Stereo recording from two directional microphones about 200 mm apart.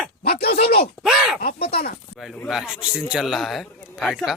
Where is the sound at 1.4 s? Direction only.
50° left (ahead or behind).